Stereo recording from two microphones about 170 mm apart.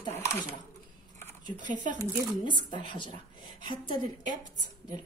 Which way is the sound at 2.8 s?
30° left (ahead or behind).